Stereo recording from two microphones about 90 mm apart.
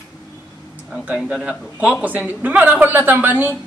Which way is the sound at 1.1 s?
5° right (ahead or behind).